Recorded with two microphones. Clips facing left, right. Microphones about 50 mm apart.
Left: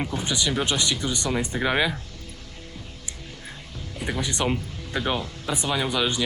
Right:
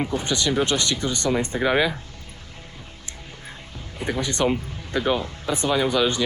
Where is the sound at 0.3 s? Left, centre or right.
Centre.